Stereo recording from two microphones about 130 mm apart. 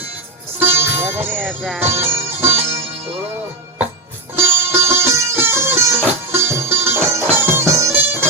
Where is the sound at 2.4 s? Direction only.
55° right (ahead or behind).